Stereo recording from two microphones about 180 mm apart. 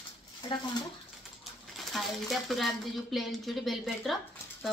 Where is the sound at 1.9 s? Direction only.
Centre (ahead or behind).